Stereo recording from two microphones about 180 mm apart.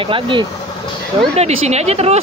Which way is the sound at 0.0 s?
30° right (ahead or behind).